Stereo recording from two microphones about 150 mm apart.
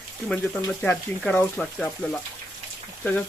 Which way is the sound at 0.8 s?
10° left (ahead or behind).